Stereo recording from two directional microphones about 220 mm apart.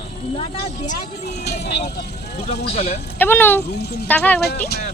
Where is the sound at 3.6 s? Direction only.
45° left (ahead or behind).